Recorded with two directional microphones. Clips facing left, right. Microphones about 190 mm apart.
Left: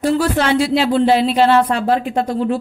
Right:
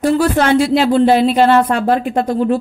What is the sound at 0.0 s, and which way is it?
Speech, 50° right (ahead or behind).